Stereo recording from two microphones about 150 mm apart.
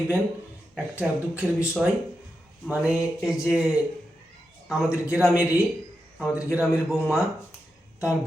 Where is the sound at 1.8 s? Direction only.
5° right (ahead or behind).